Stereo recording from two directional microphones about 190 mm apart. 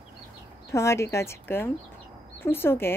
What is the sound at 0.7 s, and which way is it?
Speech, 15° left (ahead or behind).